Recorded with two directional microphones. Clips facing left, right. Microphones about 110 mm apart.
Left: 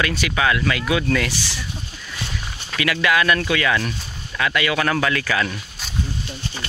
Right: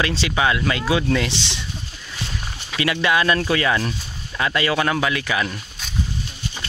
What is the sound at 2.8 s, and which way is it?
Speech, 25° right (ahead or behind).